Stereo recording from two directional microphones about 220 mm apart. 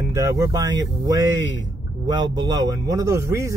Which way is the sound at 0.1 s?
15° right (ahead or behind).